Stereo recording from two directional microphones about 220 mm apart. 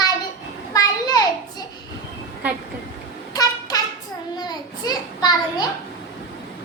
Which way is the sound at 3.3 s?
15° left (ahead or behind).